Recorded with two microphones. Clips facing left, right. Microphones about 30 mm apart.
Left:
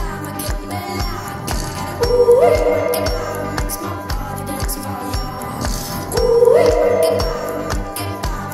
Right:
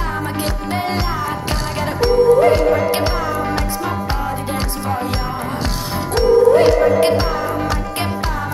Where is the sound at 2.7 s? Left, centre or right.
Right.